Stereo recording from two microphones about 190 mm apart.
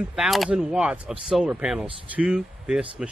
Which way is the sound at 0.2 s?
Centre (ahead or behind).